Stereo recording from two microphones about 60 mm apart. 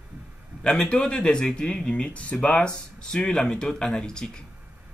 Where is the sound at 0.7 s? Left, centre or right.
Centre.